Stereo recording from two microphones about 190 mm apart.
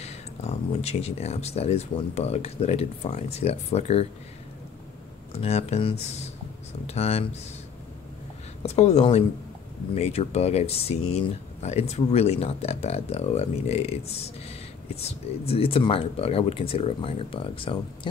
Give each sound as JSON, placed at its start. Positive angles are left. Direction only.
{"t": 0.0, "sound": "speech", "side_deg": 35}
{"t": 5.3, "sound": "speech", "side_deg": 30}
{"t": 8.6, "sound": "speech", "side_deg": 35}